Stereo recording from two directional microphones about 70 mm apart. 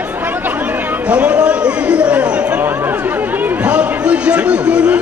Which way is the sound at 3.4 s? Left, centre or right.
Right.